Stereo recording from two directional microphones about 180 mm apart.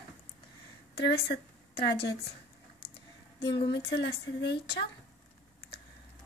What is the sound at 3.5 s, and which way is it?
Speech, 25° left (ahead or behind).